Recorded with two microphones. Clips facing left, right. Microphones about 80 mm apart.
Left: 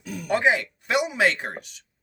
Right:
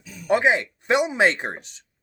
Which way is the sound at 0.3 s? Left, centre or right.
Right.